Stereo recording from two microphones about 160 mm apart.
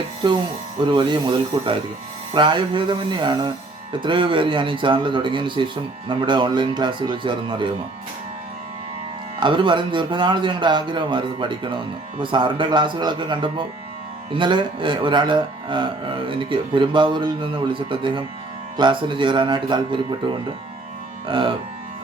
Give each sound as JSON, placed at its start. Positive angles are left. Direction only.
{"t": 0.8, "sound": "speech", "side_deg": -30}
{"t": 9.4, "sound": "speech", "side_deg": -30}